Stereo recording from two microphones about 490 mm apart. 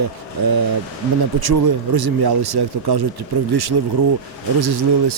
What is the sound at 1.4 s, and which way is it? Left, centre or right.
Speech, right.